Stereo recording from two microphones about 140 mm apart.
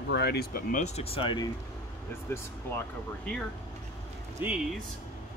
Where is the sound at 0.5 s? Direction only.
85° left.